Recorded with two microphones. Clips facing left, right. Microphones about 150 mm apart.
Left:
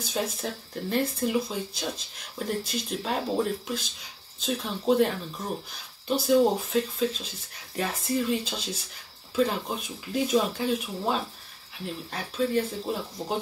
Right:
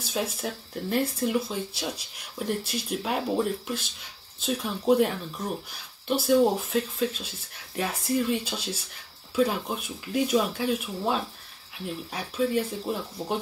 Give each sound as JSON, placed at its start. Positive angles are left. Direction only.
{"t": 0.0, "sound": "speech", "side_deg": -5}